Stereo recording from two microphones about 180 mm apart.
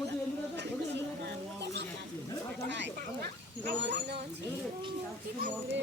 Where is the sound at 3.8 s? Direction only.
65° right (ahead or behind).